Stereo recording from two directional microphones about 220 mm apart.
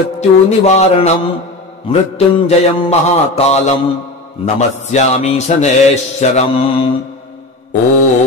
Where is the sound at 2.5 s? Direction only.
30° left (ahead or behind).